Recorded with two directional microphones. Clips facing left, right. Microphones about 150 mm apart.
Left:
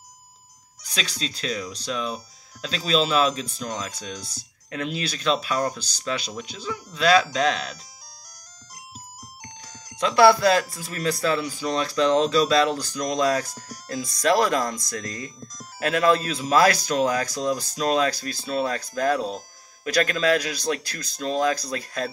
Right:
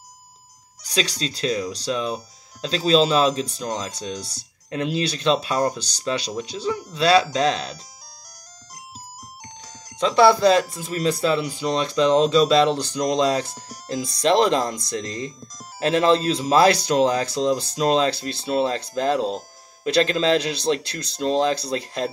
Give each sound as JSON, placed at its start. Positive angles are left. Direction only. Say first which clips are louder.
{"t": 0.8, "sound": "speech", "louder": "right 6 dB", "side_deg": -35}
{"t": 9.9, "sound": "speech", "louder": "right 1 dB", "side_deg": -25}